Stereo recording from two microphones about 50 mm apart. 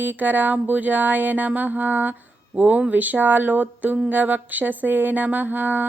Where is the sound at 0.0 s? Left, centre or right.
Right.